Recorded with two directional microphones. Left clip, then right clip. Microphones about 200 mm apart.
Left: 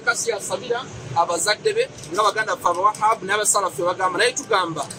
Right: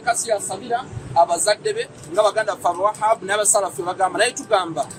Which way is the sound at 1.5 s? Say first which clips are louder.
Even; 30° right (ahead or behind).